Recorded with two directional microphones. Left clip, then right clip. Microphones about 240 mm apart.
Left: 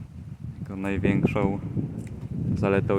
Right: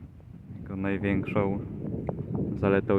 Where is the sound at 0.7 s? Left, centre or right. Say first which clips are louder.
Left 2 dB; centre.